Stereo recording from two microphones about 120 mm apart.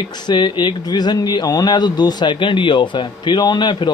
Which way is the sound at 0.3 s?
40° left (ahead or behind).